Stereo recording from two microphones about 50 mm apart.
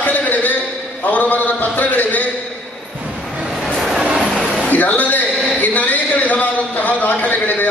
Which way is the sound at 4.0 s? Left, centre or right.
Centre.